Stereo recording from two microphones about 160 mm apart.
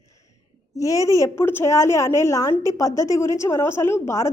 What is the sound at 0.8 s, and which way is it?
A woman's voice, 20° left (ahead or behind).